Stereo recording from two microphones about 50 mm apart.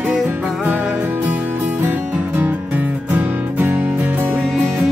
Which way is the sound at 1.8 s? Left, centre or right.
Right.